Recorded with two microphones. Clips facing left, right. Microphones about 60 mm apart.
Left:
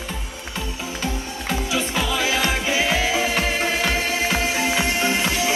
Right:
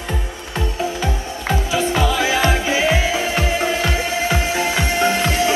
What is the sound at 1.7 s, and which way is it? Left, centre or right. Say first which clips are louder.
Music: right 6 dB; right.